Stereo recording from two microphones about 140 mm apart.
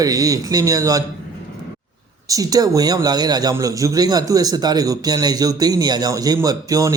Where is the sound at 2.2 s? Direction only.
25° right (ahead or behind).